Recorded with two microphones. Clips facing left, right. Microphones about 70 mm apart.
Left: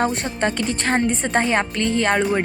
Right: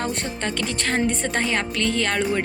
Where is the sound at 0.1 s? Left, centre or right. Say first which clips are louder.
Left 2 dB; centre.